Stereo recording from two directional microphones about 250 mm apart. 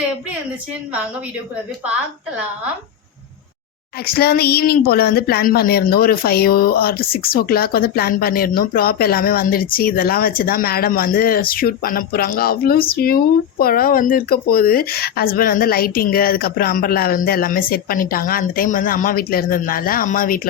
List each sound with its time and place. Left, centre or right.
4.0 s speech: left